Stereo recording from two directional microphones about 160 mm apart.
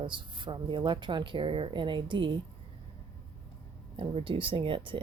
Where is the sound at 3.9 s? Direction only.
35° right (ahead or behind).